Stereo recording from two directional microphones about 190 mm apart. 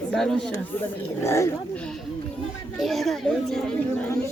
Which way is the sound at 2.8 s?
Centre (ahead or behind).